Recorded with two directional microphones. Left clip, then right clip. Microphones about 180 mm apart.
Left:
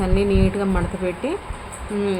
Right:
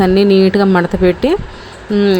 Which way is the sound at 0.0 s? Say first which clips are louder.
Right 11 dB; 45° right (ahead or behind).